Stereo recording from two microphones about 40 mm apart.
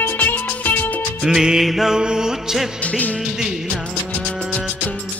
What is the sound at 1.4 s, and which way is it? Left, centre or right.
Music, centre.